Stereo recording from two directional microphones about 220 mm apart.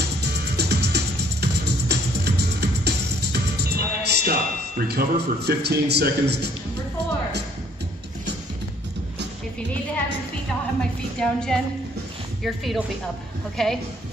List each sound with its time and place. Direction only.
0.0 s music: 50° right (ahead or behind)
10.8 s a woman's voice: 5° left (ahead or behind)